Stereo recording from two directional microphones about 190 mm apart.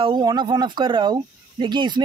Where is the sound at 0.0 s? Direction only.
25° right (ahead or behind).